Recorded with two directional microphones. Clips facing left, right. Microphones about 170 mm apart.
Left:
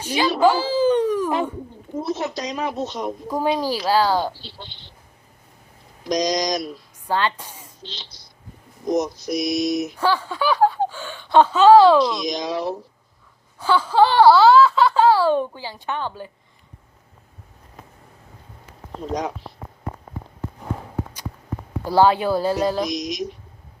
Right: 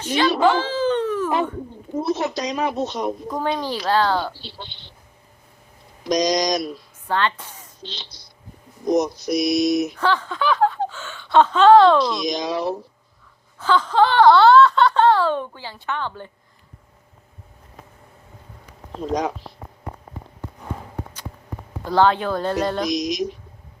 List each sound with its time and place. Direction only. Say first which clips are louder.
0.0 s speech: right 2 dB; 10° left (ahead or behind)
0.4 s wail: left 2 dB; 10° left (ahead or behind)
2.0 s a woman's voice: right 3 dB; 75° right (ahead or behind)
3.2 s speech: left 2 dB; 10° left (ahead or behind)
4.4 s speech: right 2 dB; 70° right (ahead or behind)
6.1 s a woman's voice: right 2 dB; 75° right (ahead or behind)
7.1 s a woman's voice: even; 10° left (ahead or behind)
8.9 s a woman's voice: right 2 dB; 70° right (ahead or behind)
10.0 s speech: even; 10° left (ahead or behind)
12.4 s a woman's voice: right 1 dB; 75° right (ahead or behind)
13.6 s speech: left 1 dB; 10° left (ahead or behind)
21.8 s speech: left 1 dB; 10° left (ahead or behind)
22.9 s speech: right 4 dB; 90° right